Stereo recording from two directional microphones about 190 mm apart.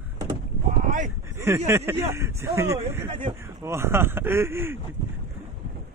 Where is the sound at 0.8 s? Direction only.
40° right (ahead or behind).